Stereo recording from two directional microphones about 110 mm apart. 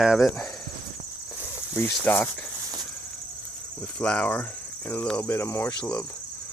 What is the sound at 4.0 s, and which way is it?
Speech, 10° left (ahead or behind).